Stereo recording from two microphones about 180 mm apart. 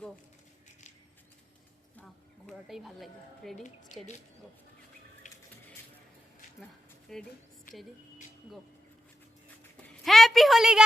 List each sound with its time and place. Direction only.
2.5 s a woman's voice: centre (ahead or behind)
5.2 s a sound: 40° left (ahead or behind)
7.1 s a woman's voice: centre (ahead or behind)
7.7 s speech: 50° left (ahead or behind)
9.8 s a woman's voice: centre (ahead or behind)